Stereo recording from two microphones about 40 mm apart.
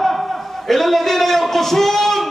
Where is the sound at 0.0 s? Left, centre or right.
Centre.